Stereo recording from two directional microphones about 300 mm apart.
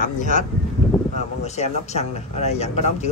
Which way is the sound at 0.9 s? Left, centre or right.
Centre.